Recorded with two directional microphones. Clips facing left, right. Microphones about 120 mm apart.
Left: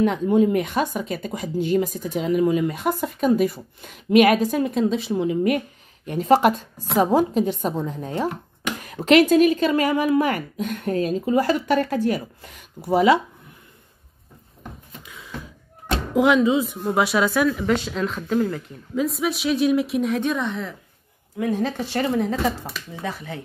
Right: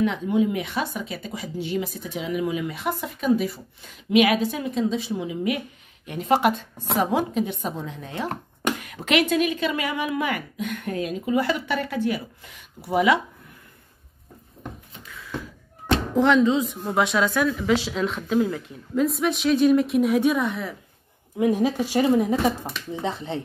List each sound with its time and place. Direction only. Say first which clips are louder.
0.0 s speech: left 4 dB; 45° left (ahead or behind)
15.0 s a sound: right 3 dB; 20° left (ahead or behind)
16.3 s speech: left 1 dB; 10° left (ahead or behind)
21.4 s speech: right 3 dB; 15° right (ahead or behind)
22.9 s speech: right 3 dB; 25° right (ahead or behind)